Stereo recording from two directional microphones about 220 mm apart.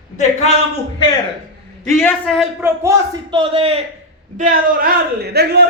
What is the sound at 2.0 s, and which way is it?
Speech, centre (ahead or behind).